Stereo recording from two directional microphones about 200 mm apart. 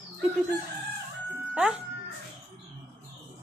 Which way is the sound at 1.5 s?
5° right (ahead or behind).